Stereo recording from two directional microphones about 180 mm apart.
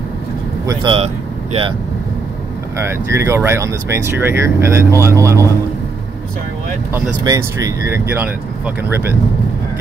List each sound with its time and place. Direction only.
0.7 s speech: 30° right (ahead or behind)
2.8 s speech: 15° right (ahead or behind)
6.9 s speech: 15° right (ahead or behind)